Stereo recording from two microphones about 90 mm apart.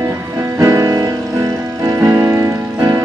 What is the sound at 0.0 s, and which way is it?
Music, 30° right (ahead or behind).